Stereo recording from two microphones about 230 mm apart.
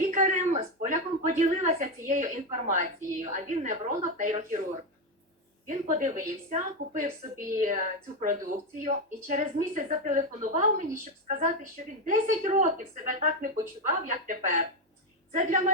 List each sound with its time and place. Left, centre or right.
0.0 s a woman's voice: right
5.6 s a woman's voice: right